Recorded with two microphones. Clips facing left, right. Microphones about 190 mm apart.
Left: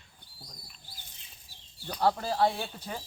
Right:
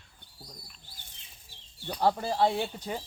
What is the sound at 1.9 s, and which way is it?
Speech, 15° right (ahead or behind).